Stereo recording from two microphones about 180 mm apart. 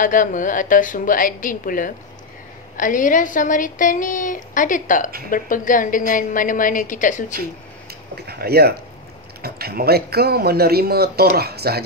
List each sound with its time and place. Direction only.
0.0 s a woman's voice: 45° left (ahead or behind)
8.3 s speech: 60° right (ahead or behind)